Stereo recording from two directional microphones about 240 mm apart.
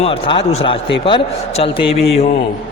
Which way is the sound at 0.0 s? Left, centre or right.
Left.